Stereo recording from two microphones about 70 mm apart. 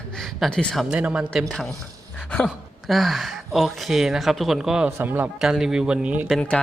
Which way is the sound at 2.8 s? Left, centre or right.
Centre.